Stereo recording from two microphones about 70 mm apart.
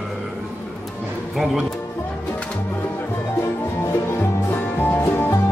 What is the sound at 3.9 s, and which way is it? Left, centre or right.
Music, left.